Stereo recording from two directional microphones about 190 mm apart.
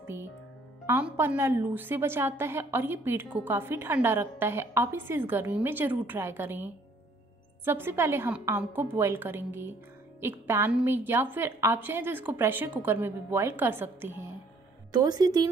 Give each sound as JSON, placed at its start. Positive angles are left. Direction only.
{"t": 0.0, "sound": "music", "side_deg": -15}
{"t": 0.8, "sound": "a woman's voice", "side_deg": -10}